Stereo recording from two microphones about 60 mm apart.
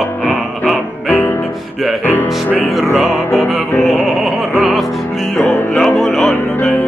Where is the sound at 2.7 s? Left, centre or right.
Centre.